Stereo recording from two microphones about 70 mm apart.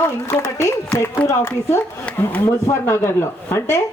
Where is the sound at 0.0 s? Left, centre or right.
Left.